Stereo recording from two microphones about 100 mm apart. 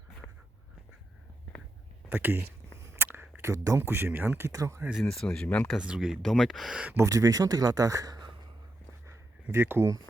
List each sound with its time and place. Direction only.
2.0 s speech: 20° right (ahead or behind)
4.5 s speech: 30° right (ahead or behind)
4.9 s speech: 5° left (ahead or behind)
5.7 s speech: 10° right (ahead or behind)
6.9 s speech: 30° right (ahead or behind)
9.0 s a sound: 25° right (ahead or behind)